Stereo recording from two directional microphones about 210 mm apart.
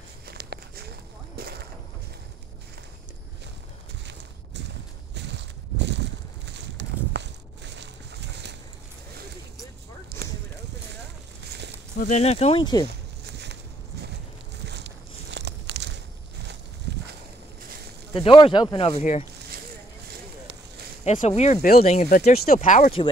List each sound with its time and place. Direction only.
0.3 s walk: 50° right (ahead or behind)
5.1 s a sound: 55° right (ahead or behind)
10.2 s clip-clop: 45° right (ahead or behind)
12.0 s speech: 30° left (ahead or behind)
15.3 s a sound: 55° right (ahead or behind)
18.1 s speech: 25° left (ahead or behind)
21.0 s speech: 35° left (ahead or behind)
22.3 s speech: 45° left (ahead or behind)